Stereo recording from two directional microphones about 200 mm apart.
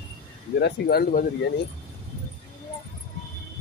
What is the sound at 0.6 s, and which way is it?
Speech, 55° left (ahead or behind).